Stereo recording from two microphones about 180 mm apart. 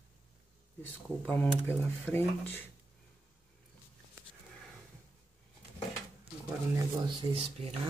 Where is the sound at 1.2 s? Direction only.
10° left (ahead or behind).